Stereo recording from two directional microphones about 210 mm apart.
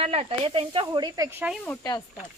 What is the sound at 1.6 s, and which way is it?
Speech, 15° left (ahead or behind).